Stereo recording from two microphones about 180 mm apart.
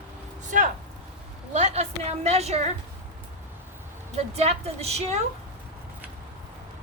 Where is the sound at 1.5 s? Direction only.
40° right (ahead or behind).